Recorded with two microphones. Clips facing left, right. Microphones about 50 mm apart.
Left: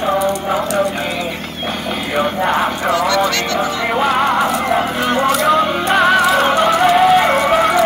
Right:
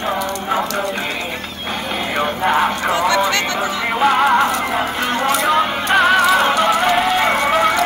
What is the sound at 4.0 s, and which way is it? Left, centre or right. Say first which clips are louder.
Music: right 2 dB; centre.